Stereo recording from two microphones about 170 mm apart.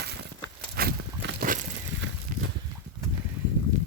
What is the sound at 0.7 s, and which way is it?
Walk, 65° right (ahead or behind).